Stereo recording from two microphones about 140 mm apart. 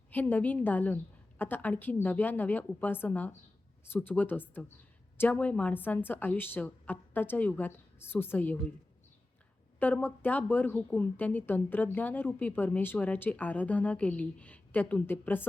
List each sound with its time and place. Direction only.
0.1 s speech: 15° left (ahead or behind)
9.8 s speech: 15° left (ahead or behind)